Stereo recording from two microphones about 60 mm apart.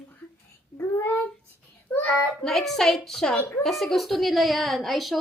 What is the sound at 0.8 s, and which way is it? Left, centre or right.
Child singing, left.